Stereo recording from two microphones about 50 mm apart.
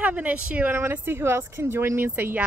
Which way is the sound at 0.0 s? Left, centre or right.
Right.